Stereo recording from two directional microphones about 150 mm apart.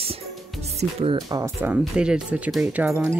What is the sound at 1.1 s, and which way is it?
Speech, 20° right (ahead or behind).